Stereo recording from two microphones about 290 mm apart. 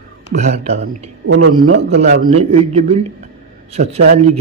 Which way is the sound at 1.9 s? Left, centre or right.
Right.